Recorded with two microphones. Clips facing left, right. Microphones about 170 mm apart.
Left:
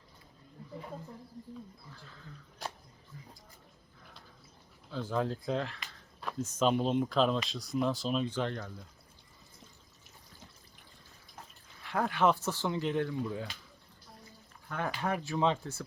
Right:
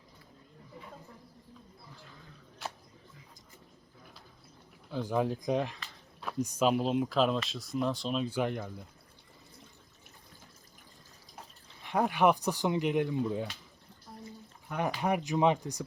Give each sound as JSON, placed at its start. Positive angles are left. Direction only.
{"t": 2.6, "sound": "a sound", "side_deg": 40}
{"t": 4.9, "sound": "speech", "side_deg": -15}
{"t": 8.3, "sound": "speech", "side_deg": -10}
{"t": 11.8, "sound": "speech", "side_deg": -20}
{"t": 14.7, "sound": "speech", "side_deg": -15}